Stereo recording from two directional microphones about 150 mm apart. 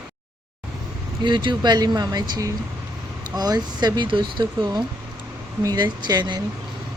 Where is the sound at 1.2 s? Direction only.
30° right (ahead or behind).